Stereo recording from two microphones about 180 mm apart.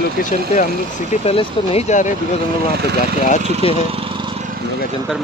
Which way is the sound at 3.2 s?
45° left (ahead or behind).